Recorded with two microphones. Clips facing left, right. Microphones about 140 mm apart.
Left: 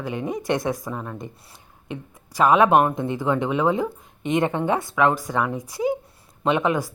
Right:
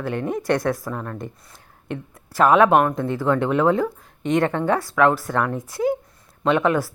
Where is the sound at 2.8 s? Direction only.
20° left (ahead or behind).